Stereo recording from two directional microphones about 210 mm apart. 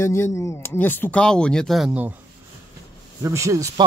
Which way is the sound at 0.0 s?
10° left (ahead or behind).